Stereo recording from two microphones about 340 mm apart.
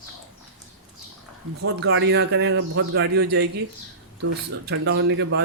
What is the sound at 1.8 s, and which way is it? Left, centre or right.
Speech, right.